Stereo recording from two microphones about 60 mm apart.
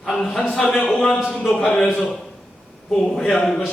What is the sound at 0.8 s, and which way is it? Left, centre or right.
Speech, centre.